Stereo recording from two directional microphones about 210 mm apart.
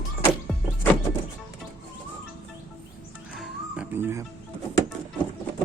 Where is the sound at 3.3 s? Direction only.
5° right (ahead or behind).